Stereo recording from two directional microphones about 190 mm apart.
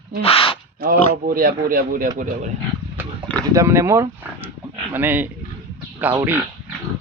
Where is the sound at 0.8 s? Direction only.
50° right (ahead or behind).